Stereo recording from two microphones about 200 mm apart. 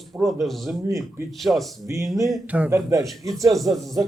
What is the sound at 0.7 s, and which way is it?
Speech, 15° right (ahead or behind).